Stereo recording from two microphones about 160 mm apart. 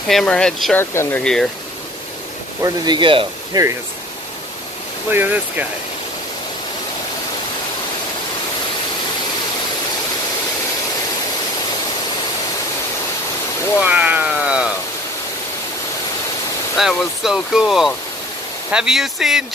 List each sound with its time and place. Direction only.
0.1 s speech: 5° left (ahead or behind)
2.6 s speech: 25° right (ahead or behind)
5.1 s speech: 10° right (ahead or behind)
13.7 s speech: 10° right (ahead or behind)
16.7 s speech: centre (ahead or behind)